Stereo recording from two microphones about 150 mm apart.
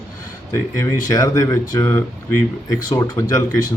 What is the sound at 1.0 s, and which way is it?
Speech, 25° left (ahead or behind).